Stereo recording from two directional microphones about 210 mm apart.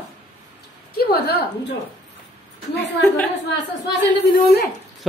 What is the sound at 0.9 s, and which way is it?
Speech, 50° left (ahead or behind).